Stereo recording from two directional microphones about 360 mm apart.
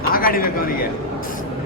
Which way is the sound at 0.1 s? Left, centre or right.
Left.